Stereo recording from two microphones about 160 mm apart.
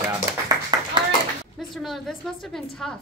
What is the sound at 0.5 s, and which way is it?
Clapping, 20° right (ahead or behind).